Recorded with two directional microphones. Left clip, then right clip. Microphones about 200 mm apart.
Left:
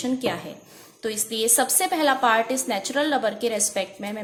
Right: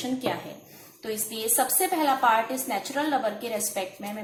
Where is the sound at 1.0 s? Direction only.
45° left (ahead or behind).